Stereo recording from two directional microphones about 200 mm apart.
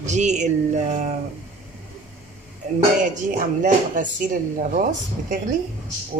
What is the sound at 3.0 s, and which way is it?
Speech, 40° right (ahead or behind).